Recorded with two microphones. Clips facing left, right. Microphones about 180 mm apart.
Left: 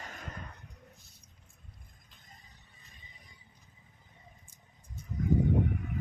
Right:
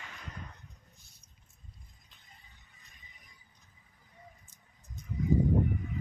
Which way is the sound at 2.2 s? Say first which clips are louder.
Left 3 dB; 40° left (ahead or behind).